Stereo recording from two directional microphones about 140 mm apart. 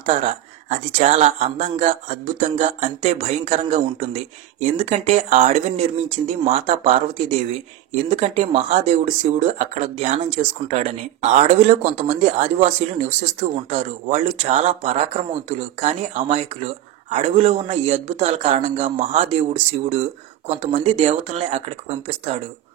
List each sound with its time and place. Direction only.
0.0 s speech: 55° right (ahead or behind)